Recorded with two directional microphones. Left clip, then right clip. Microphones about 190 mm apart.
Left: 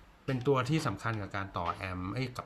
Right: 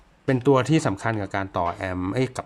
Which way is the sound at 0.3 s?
40° right (ahead or behind).